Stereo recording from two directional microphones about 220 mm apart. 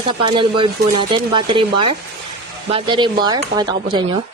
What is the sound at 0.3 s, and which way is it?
Speech, 20° right (ahead or behind).